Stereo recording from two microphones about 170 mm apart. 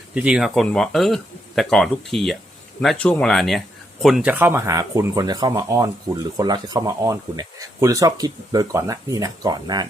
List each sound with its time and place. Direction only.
0.1 s speech: 5° right (ahead or behind); by 9.8 s 25° right (ahead or behind)